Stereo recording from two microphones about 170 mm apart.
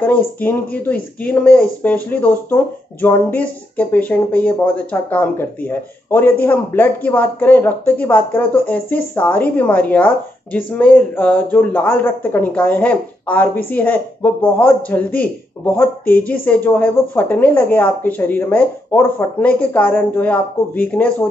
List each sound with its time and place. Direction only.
0.0 s speech: 10° left (ahead or behind)